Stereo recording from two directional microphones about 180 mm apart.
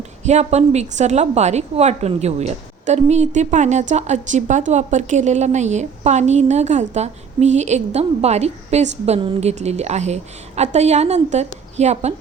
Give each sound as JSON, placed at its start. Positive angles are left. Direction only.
{"t": 0.3, "sound": "a woman's voice", "side_deg": -40}